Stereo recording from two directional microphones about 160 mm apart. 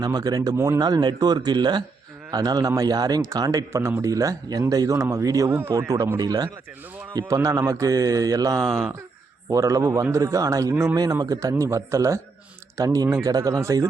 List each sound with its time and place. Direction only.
0.0 s speech: 25° right (ahead or behind)
8.6 s speech: centre (ahead or behind)
9.5 s speech: 20° right (ahead or behind)